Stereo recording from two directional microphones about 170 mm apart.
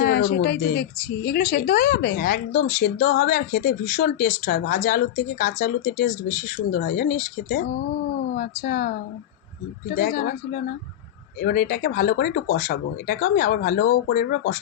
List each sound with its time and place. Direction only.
0.0 s speech: 75° left (ahead or behind); by 1.9 s 60° left (ahead or behind)
1.9 s speech: 70° left (ahead or behind)